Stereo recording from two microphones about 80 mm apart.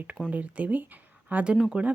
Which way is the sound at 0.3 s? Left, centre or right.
Centre.